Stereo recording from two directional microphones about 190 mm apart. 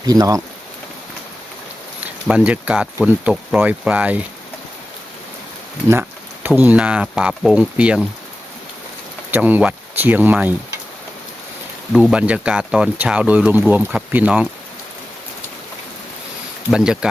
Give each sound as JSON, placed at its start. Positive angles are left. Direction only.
{"t": 0.0, "sound": "speech", "side_deg": -20}
{"t": 2.2, "sound": "speech", "side_deg": -5}
{"t": 5.9, "sound": "a sound", "side_deg": -10}
{"t": 6.5, "sound": "speech", "side_deg": -5}
{"t": 9.3, "sound": "speech", "side_deg": -10}
{"t": 11.9, "sound": "speech", "side_deg": -5}
{"t": 16.7, "sound": "speech", "side_deg": -5}